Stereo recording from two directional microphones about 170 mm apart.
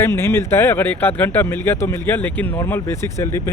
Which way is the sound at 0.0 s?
15° left (ahead or behind).